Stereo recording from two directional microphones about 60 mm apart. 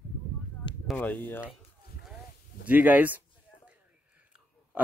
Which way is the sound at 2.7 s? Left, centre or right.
Right.